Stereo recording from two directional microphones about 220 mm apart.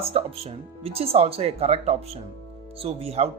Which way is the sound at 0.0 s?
25° right (ahead or behind).